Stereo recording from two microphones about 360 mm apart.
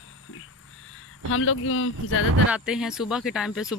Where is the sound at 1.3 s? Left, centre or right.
Left.